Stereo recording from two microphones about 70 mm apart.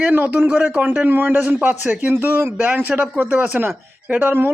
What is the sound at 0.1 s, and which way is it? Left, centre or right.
A man's voice, right.